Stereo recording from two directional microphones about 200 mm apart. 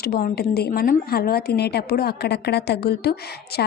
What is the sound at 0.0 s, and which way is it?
A woman's voice, 50° left (ahead or behind).